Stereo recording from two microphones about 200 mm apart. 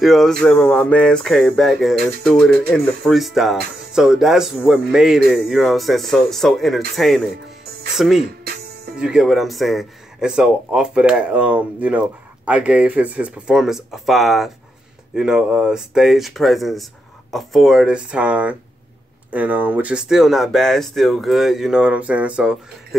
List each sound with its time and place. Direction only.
0.0 s speech: centre (ahead or behind)